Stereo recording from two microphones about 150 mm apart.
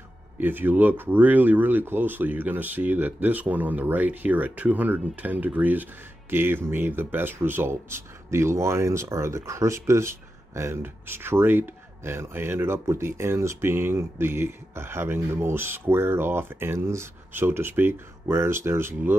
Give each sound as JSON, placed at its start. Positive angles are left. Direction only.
{"t": 0.4, "sound": "speech", "side_deg": -15}